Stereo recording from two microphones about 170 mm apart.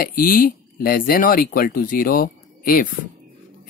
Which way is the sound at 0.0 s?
55° left (ahead or behind).